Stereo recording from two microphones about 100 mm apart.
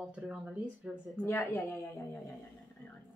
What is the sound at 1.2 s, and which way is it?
Speech, 25° left (ahead or behind).